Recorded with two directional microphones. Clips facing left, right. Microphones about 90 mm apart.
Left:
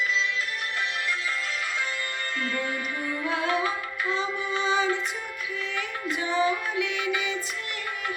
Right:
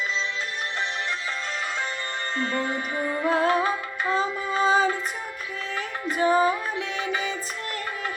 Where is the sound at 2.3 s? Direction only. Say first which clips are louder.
Right 4 dB; 30° right (ahead or behind).